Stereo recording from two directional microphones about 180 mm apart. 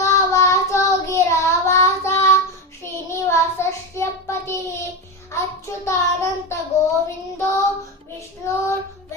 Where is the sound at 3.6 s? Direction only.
15° left (ahead or behind).